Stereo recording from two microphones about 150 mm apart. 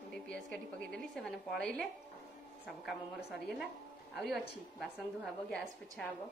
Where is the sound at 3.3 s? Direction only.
5° right (ahead or behind).